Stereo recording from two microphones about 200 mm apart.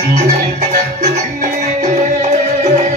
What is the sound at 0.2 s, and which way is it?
Music, 35° right (ahead or behind).